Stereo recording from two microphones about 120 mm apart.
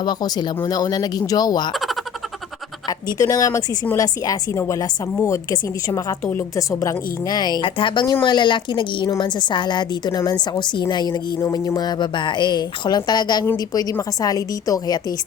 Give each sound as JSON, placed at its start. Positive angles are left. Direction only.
{"t": 0.0, "sound": "a woman's voice", "side_deg": 35}
{"t": 3.2, "sound": "a woman's voice", "side_deg": 30}
{"t": 9.0, "sound": "a woman's voice", "side_deg": 30}
{"t": 9.5, "sound": "a woman's voice", "side_deg": 40}